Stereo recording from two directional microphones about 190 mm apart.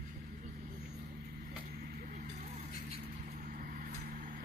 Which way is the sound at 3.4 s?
45° right (ahead or behind).